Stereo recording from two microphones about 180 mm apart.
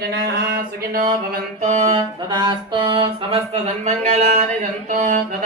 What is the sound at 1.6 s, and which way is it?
Music, 35° right (ahead or behind).